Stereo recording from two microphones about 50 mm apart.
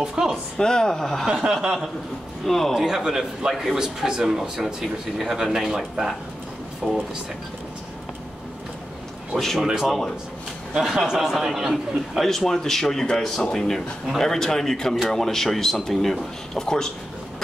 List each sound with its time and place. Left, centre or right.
0.0 s speech: centre
0.6 s a man's voice: centre
1.2 s speech: centre
2.4 s a man's voice: centre
2.8 s speech: centre
9.6 s a man's voice: centre